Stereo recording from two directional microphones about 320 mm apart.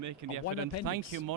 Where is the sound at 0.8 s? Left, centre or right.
Right.